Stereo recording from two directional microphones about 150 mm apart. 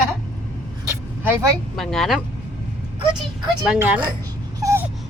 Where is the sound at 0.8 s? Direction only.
15° right (ahead or behind).